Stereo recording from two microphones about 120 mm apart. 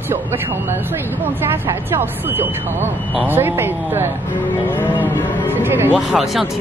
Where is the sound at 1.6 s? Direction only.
20° right (ahead or behind).